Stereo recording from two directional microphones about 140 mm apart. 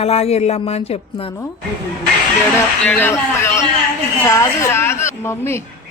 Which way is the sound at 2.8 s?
15° left (ahead or behind).